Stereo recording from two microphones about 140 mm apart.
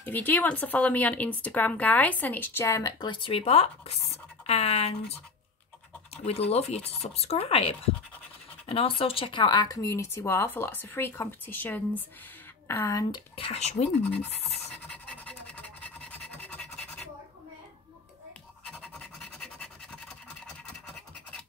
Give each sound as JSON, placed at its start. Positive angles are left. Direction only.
{"t": 0.0, "sound": "speech", "side_deg": 10}
{"t": 3.1, "sound": "speech", "side_deg": 40}
{"t": 6.5, "sound": "speech", "side_deg": 50}
{"t": 13.1, "sound": "speech", "side_deg": 45}
{"t": 14.0, "sound": "speech", "side_deg": 15}
{"t": 14.8, "sound": "scratch", "side_deg": 5}
{"t": 18.7, "sound": "scratch", "side_deg": 5}